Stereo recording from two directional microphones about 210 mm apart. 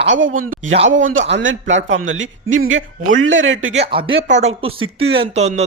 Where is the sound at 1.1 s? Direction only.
60° right (ahead or behind).